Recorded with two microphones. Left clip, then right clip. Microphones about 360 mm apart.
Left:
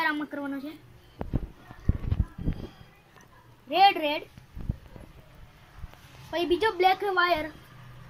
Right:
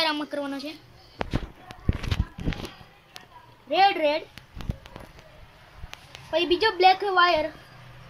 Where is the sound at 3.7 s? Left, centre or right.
Centre.